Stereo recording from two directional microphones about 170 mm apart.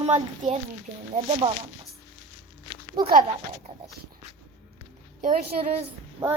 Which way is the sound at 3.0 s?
25° right (ahead or behind).